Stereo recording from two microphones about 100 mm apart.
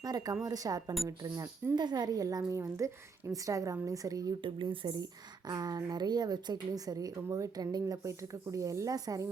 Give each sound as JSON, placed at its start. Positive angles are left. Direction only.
{"t": 0.0, "sound": "a woman's voice", "side_deg": -40}
{"t": 4.4, "sound": "speech", "side_deg": -55}
{"t": 5.5, "sound": "a woman's voice", "side_deg": -40}